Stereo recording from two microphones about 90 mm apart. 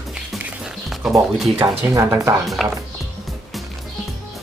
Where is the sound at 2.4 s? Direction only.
Centre (ahead or behind).